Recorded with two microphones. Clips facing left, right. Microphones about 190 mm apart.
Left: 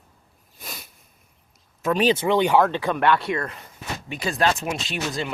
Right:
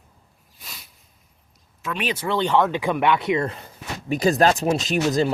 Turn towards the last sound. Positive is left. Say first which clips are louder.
# right 8 dB
turn(degrees=-40)  # may be behind; listen again after turning